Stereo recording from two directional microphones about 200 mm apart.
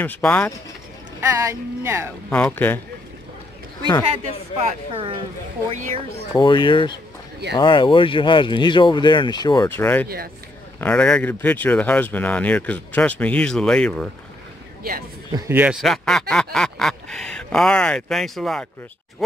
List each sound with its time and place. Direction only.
0.0 s speech: 10° left (ahead or behind)
1.2 s speech: 15° right (ahead or behind)
2.2 s speech: 5° left (ahead or behind)
4.9 s speech: 25° right (ahead or behind)
6.3 s speech: 25° left (ahead or behind)
10.0 s speech: 50° right (ahead or behind)
10.8 s speech: 5° left (ahead or behind)
15.3 s speech: 10° right (ahead or behind)
15.8 s speech: centre (ahead or behind)